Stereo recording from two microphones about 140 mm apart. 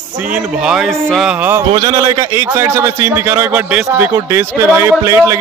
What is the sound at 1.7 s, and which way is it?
Speech, 30° right (ahead or behind).